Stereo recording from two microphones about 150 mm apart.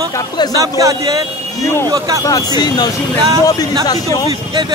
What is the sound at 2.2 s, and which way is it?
Speech, 25° left (ahead or behind).